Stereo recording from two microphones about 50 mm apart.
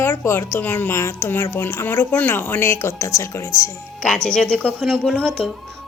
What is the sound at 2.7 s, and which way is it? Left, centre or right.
Speech, left.